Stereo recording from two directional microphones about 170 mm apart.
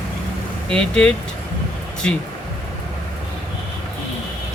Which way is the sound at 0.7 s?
5° left (ahead or behind).